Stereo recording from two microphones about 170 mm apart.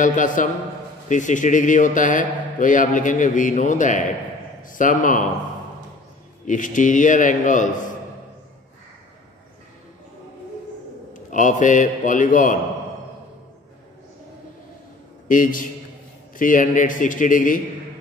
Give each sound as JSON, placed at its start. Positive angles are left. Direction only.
{"t": 0.0, "sound": "a man's voice", "side_deg": 50}
{"t": 6.4, "sound": "a man's voice", "side_deg": 50}
{"t": 11.2, "sound": "a man's voice", "side_deg": 50}
{"t": 15.2, "sound": "a man's voice", "side_deg": 50}